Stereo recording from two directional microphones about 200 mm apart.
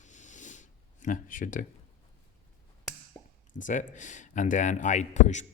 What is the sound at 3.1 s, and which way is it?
Plop, 15° left (ahead or behind).